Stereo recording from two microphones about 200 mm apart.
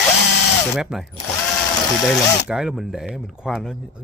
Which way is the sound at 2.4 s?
Centre (ahead or behind).